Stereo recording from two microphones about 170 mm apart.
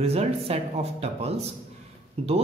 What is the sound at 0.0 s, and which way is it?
Speech, 35° right (ahead or behind).